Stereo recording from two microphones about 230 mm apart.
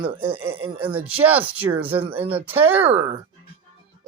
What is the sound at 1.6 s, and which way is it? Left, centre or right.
Speech, right.